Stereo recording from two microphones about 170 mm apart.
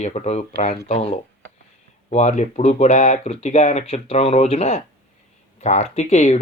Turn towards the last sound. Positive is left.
turn(degrees=40)  # may be behind; listen again after turning